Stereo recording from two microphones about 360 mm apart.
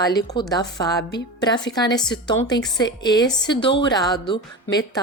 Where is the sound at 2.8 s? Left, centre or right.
Left.